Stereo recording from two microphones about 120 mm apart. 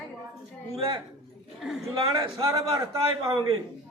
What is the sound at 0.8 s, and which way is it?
Speech, 45° right (ahead or behind).